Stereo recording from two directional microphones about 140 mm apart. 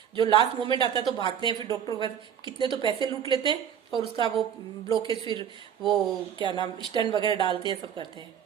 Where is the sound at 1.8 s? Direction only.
30° left (ahead or behind).